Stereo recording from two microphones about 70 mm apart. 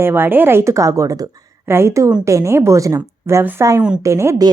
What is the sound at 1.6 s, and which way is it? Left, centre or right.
A woman's voice, right.